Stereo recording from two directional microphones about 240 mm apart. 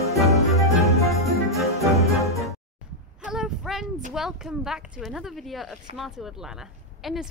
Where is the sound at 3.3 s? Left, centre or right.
Centre.